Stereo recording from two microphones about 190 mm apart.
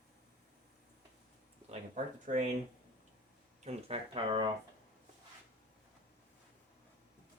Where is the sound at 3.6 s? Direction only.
35° right (ahead or behind).